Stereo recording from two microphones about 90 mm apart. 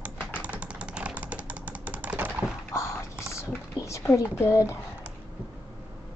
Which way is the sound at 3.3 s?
35° left (ahead or behind).